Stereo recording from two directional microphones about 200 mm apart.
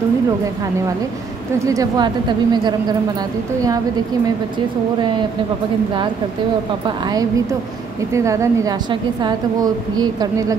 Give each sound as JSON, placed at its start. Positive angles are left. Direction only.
{"t": 1.7, "sound": "a woman's voice", "side_deg": -20}
{"t": 8.1, "sound": "a woman's voice", "side_deg": -15}